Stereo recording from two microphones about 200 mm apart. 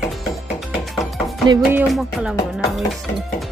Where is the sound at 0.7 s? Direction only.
Centre (ahead or behind).